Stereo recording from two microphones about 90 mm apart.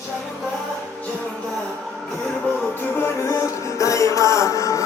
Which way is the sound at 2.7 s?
25° left (ahead or behind).